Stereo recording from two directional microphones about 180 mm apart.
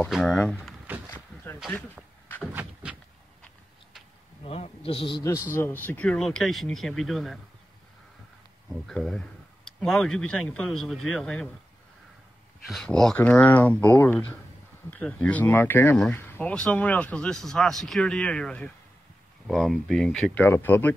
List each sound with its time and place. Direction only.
0.1 s speech: centre (ahead or behind)
0.6 s a sound: 10° right (ahead or behind)
2.4 s a sound: 5° right (ahead or behind)
4.5 s a man's voice: 35° left (ahead or behind)
5.5 s speech: 10° left (ahead or behind)
8.8 s speech: 5° left (ahead or behind)
12.6 s speech: centre (ahead or behind)